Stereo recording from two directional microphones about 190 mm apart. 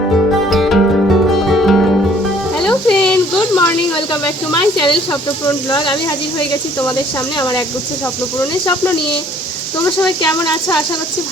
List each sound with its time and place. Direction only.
0.5 s music: centre (ahead or behind)
2.6 s a sound: 5° left (ahead or behind)
3.6 s speech: 20° left (ahead or behind)
7.3 s speech: 20° left (ahead or behind)
9.8 s speech: 10° left (ahead or behind)